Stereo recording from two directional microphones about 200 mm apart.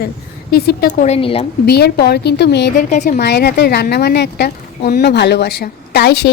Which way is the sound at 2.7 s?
40° left (ahead or behind).